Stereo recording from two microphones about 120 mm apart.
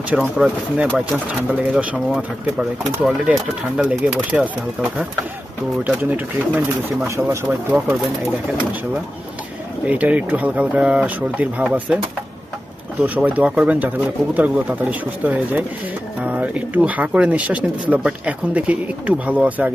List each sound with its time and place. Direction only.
0.1 s speech: 5° right (ahead or behind)
9.8 s speech: 10° right (ahead or behind)
13.0 s speech: 15° right (ahead or behind)